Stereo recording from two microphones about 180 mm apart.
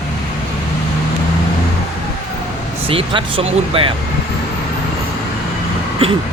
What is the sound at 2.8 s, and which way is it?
Speech, 30° right (ahead or behind).